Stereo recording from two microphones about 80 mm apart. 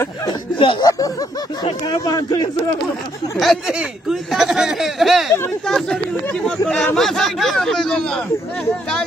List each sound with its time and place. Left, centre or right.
0.3 s speech: left
0.8 s speech: left
3.3 s speech: centre